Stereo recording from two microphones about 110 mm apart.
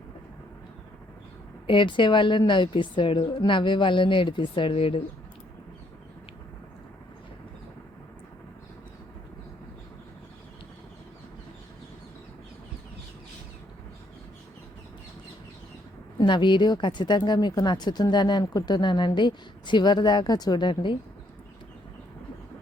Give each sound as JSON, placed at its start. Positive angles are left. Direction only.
{"t": 1.6, "sound": "a woman's voice", "side_deg": 50}
{"t": 16.1, "sound": "speech", "side_deg": 45}